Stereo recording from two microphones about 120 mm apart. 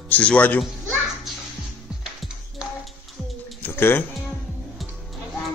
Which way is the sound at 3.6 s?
20° left (ahead or behind).